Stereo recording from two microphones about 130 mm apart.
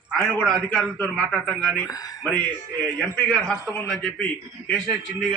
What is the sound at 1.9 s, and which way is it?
Speech, 30° left (ahead or behind).